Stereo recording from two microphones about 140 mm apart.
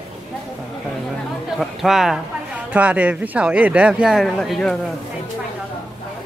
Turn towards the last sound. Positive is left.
turn(degrees=5)  # may be behind; listen again after turning